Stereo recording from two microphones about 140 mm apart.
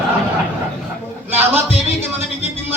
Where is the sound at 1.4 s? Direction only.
10° right (ahead or behind).